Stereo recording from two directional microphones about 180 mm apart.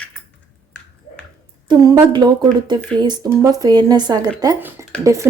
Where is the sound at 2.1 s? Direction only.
25° right (ahead or behind).